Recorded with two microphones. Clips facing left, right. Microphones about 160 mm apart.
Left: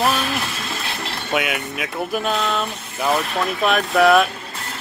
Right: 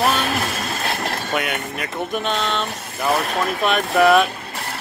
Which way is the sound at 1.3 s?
Centre (ahead or behind).